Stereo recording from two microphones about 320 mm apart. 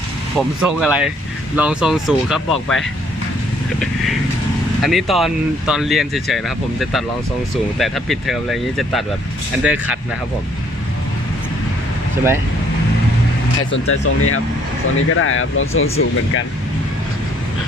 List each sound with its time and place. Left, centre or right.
0.3 s speech: centre
4.8 s speech: centre
13.6 s speech: left